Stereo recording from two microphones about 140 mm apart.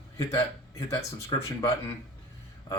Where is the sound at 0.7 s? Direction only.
20° left (ahead or behind).